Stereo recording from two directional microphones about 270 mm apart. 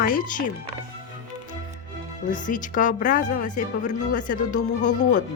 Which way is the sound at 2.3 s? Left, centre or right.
Left.